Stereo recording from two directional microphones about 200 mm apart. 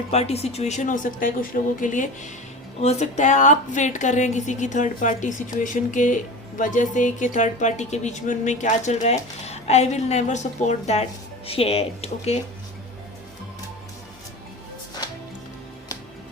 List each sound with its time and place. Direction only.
0.1 s a woman's voice: 30° left (ahead or behind)